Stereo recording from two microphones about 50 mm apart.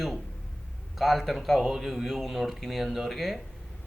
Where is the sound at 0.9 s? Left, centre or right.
Centre.